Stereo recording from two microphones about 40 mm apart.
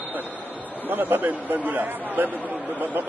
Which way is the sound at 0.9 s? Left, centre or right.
Right.